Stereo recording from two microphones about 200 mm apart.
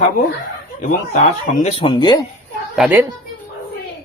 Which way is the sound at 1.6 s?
25° left (ahead or behind).